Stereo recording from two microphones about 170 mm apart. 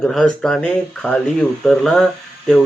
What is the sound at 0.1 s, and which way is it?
Speech, centre (ahead or behind).